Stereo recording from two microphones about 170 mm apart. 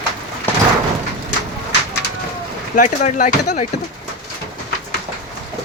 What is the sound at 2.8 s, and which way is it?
Speech, 45° left (ahead or behind).